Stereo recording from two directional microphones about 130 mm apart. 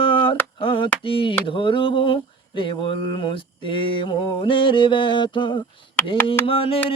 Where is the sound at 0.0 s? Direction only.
40° left (ahead or behind).